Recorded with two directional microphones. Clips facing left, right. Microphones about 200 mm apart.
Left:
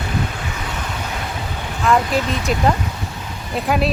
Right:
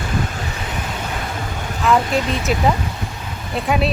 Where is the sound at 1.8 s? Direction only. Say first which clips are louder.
Even; centre (ahead or behind).